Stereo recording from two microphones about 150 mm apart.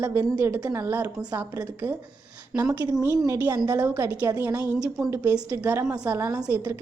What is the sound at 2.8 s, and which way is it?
A woman's voice, 25° right (ahead or behind).